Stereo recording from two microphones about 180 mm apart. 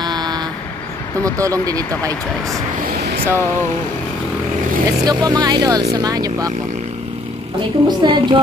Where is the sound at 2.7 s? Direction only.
60° right (ahead or behind).